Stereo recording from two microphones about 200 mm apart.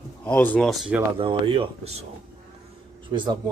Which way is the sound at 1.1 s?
25° right (ahead or behind).